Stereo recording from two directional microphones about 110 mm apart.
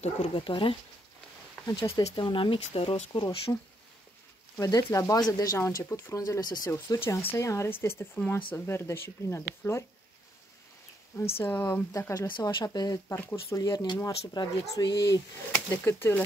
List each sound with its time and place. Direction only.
0.3 s speech: 50° left (ahead or behind)
1.8 s speech: 50° left (ahead or behind)
3.5 s speech: 30° left (ahead or behind)
6.7 s speech: 25° left (ahead or behind)
11.1 s speech: 25° left (ahead or behind)
12.3 s speech: 45° left (ahead or behind)
12.6 s speech: 35° left (ahead or behind)
13.1 s speech: 25° left (ahead or behind)
15.5 s speech: 20° left (ahead or behind)